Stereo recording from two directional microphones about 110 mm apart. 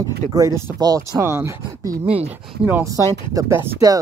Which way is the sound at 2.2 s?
20° right (ahead or behind).